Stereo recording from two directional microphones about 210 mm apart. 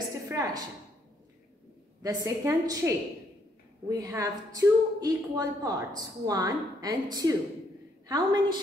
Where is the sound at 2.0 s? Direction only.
15° right (ahead or behind).